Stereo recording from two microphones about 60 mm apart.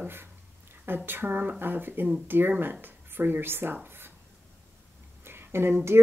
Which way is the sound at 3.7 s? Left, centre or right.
Right.